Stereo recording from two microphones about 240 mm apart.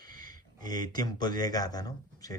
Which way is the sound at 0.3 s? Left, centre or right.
Centre.